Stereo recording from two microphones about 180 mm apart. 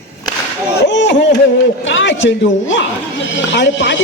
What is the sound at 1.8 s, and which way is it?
A woman's voice, 90° left.